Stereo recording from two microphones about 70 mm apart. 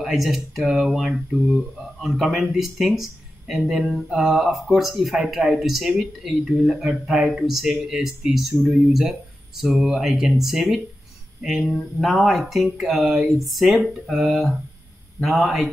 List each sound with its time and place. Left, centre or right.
0.0 s speech: centre
13.4 s speech: centre